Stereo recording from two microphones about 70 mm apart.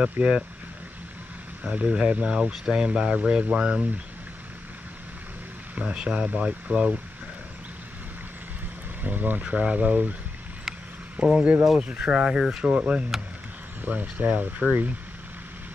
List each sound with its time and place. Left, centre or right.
0.0 s speech: centre
1.6 s speech: centre
5.8 s speech: centre
9.0 s speech: right
11.1 s speech: centre